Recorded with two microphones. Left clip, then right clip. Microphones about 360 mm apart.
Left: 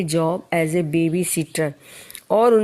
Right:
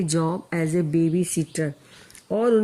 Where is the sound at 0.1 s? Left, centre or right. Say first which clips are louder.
Left 8 dB; centre.